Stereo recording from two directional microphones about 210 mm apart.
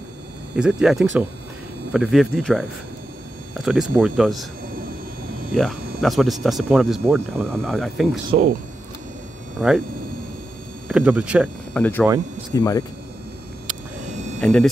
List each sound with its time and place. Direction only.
0.6 s speech: 5° right (ahead or behind)
5.5 s speech: centre (ahead or behind)
9.6 s speech: 5° right (ahead or behind)
10.9 s speech: 5° right (ahead or behind)
11.7 s speech: 5° left (ahead or behind)
14.4 s speech: 5° left (ahead or behind)